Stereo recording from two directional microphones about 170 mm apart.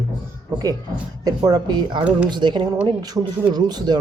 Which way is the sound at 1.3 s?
20° right (ahead or behind).